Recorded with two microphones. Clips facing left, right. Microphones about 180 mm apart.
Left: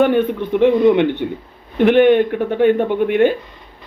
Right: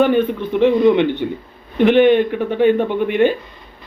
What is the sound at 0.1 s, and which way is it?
Speech, 15° left (ahead or behind).